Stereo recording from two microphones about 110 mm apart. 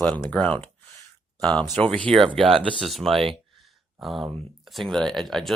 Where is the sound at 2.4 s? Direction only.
55° right (ahead or behind).